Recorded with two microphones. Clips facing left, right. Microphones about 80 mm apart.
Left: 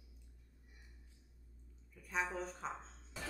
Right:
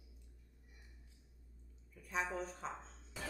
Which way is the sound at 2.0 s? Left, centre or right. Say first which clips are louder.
Even; centre.